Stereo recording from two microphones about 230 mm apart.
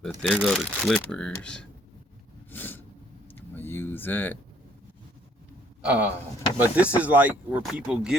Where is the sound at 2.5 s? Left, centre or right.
Centre.